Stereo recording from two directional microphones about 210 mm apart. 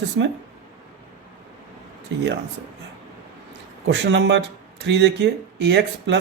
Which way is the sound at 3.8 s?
55° right (ahead or behind).